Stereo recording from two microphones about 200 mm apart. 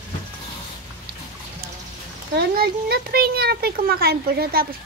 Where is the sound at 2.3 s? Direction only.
50° right (ahead or behind).